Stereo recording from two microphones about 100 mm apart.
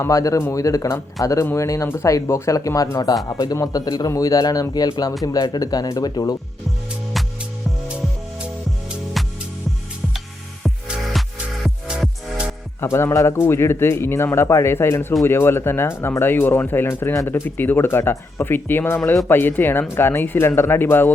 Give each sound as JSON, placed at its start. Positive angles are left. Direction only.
{"t": 0.0, "sound": "speech", "side_deg": 35}
{"t": 9.2, "sound": "music", "side_deg": 0}
{"t": 10.6, "sound": "music", "side_deg": 0}
{"t": 12.8, "sound": "speech", "side_deg": 25}